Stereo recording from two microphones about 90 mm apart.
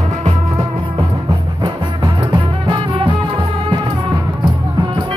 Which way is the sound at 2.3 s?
60° right (ahead or behind).